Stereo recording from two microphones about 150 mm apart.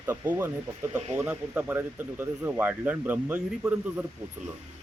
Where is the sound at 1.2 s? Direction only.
10° right (ahead or behind).